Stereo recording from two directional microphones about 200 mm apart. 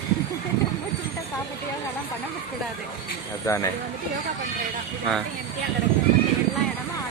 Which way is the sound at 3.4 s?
15° left (ahead or behind).